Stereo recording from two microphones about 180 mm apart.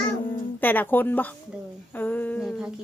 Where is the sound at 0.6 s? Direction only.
10° left (ahead or behind).